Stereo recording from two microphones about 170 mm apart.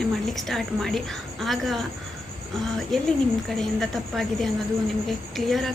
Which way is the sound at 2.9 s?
Centre (ahead or behind).